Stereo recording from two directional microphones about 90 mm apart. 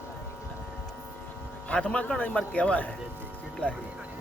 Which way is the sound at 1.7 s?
15° left (ahead or behind).